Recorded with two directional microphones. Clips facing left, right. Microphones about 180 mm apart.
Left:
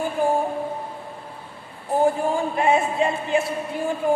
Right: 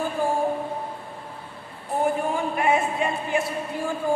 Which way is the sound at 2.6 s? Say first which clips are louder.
Left 3 dB; 25° left (ahead or behind).